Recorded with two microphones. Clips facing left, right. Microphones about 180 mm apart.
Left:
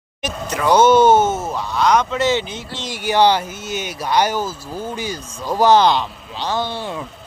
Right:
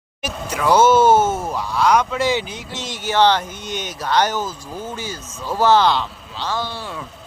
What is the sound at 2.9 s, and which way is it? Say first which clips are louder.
Speech: left 1 dB; 10° left (ahead or behind).